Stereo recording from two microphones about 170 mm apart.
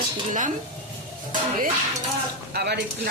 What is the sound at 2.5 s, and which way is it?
Speech, 70° right (ahead or behind).